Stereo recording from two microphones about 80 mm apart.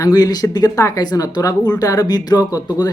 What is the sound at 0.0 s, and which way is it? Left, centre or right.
Speech, left.